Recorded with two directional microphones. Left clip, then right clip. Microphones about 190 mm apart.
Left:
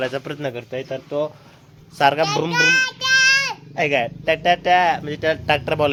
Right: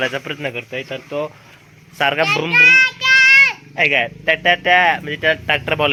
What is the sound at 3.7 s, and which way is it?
A man's voice, centre (ahead or behind).